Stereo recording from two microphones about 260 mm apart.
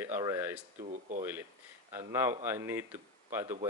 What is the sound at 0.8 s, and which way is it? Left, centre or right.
Speech, right.